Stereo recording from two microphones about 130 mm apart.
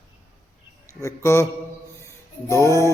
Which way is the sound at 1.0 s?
20° left (ahead or behind).